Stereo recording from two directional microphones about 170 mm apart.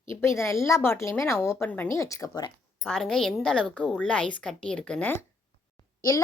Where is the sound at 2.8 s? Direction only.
Centre (ahead or behind).